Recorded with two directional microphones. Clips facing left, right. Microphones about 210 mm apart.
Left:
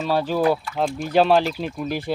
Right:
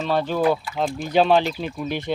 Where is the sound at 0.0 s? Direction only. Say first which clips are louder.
Even; 5° left (ahead or behind).